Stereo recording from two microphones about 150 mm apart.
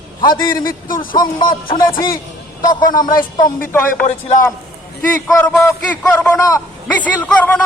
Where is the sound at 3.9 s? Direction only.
55° left (ahead or behind).